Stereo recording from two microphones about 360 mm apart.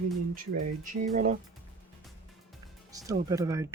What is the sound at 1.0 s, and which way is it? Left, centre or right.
Speech, centre.